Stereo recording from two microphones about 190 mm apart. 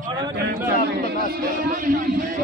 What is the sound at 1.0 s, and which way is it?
A man's voice, 55° right (ahead or behind).